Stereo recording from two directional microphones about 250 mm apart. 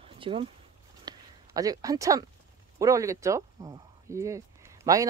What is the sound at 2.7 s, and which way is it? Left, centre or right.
Speech, centre.